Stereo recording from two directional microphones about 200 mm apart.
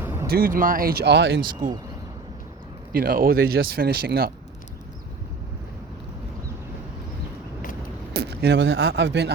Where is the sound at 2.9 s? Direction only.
45° right (ahead or behind).